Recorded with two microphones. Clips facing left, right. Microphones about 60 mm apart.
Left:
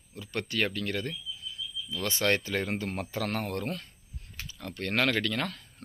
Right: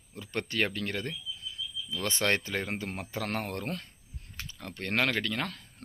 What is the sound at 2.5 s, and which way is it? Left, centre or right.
Speech, centre.